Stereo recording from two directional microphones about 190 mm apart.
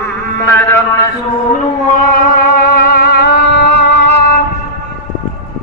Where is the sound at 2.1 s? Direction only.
50° left (ahead or behind).